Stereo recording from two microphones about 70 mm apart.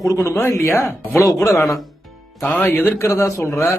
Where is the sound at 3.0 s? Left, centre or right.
Left.